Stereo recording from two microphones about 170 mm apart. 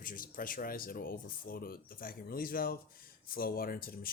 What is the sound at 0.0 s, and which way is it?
Speech, 55° left (ahead or behind).